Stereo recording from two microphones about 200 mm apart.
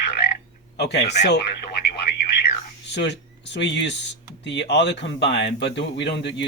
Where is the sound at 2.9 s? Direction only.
60° left (ahead or behind).